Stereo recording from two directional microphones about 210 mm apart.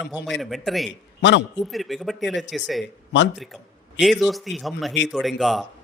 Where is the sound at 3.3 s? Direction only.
Centre (ahead or behind).